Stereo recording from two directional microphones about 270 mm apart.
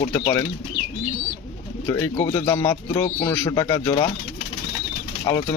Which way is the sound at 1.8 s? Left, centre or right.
Centre.